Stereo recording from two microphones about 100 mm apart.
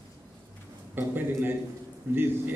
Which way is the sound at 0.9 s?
20° right (ahead or behind).